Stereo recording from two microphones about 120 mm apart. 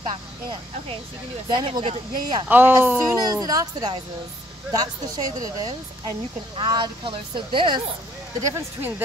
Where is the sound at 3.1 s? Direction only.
35° right (ahead or behind).